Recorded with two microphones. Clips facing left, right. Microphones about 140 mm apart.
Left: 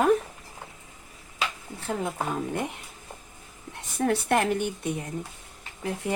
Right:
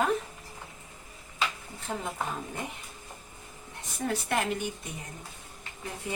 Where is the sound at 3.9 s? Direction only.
60° left (ahead or behind).